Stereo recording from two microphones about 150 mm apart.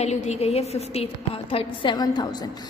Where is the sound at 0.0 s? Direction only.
50° left (ahead or behind).